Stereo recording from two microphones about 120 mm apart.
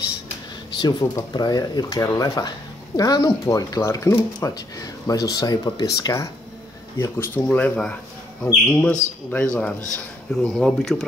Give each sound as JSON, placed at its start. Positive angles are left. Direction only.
{"t": 0.7, "sound": "speech", "side_deg": 35}
{"t": 7.0, "sound": "speech", "side_deg": 20}